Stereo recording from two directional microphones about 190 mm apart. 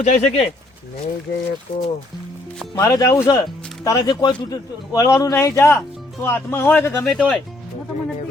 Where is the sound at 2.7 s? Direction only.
15° left (ahead or behind).